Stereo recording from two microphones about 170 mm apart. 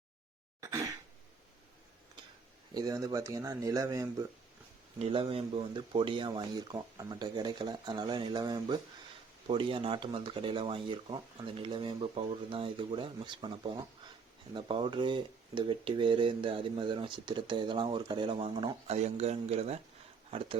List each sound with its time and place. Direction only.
2.7 s speech: 20° right (ahead or behind)
4.9 s speech: 35° right (ahead or behind)